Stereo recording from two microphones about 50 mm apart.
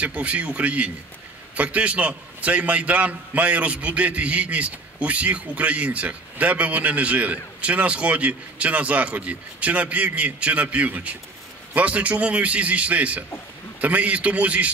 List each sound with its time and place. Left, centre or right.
0.0 s a man's voice: right